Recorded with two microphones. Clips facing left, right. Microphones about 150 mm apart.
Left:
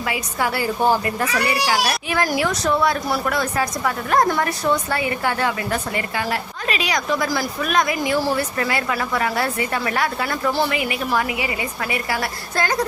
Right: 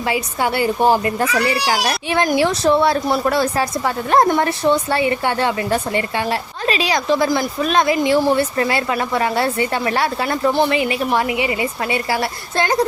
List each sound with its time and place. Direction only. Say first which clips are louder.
0.0 s a child's voice: right 4 dB; 30° right (ahead or behind)